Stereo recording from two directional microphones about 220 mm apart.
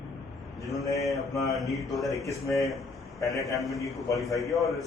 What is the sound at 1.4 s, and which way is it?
Speech, centre (ahead or behind).